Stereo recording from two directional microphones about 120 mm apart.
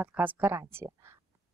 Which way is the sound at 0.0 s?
15° right (ahead or behind).